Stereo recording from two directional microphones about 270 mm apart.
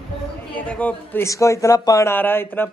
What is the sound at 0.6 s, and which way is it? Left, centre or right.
A woman's voice, centre.